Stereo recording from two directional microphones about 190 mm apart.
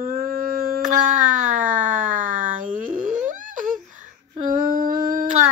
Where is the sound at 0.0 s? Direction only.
50° right (ahead or behind).